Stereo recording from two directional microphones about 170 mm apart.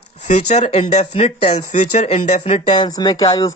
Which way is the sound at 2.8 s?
20° left (ahead or behind).